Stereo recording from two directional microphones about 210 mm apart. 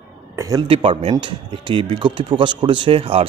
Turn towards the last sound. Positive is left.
turn(degrees=-25)  # may be behind; listen again after turning